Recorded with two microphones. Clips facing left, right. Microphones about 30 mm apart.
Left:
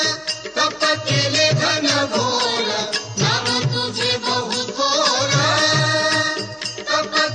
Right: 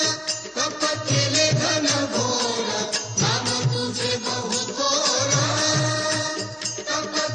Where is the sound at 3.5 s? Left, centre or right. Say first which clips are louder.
Left 4 dB; left.